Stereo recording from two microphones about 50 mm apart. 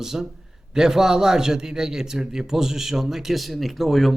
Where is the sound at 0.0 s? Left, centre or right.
Centre.